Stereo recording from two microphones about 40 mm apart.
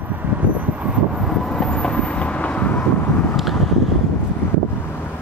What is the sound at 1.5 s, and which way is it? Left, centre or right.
Vehicle, left.